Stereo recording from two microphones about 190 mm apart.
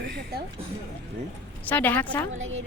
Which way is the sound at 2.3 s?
90° right.